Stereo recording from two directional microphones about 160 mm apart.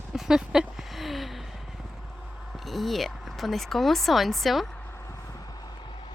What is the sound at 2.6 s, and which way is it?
Speech, centre (ahead or behind).